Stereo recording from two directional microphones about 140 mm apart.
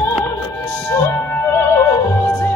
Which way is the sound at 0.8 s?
15° left (ahead or behind).